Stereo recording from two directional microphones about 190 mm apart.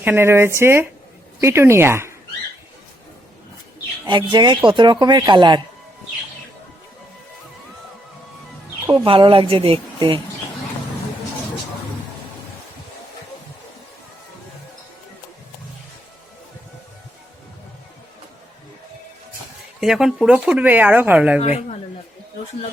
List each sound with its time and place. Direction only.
0.0 s speech: 10° right (ahead or behind)
4.0 s speech: 25° right (ahead or behind)
8.9 s speech: 25° right (ahead or behind)
19.8 s speech: centre (ahead or behind)
21.4 s speech: 35° left (ahead or behind)